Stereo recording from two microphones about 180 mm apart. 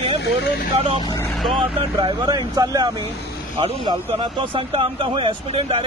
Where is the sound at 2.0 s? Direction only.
25° right (ahead or behind).